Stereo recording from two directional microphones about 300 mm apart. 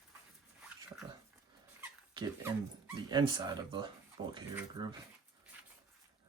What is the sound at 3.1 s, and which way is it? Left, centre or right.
Speech, centre.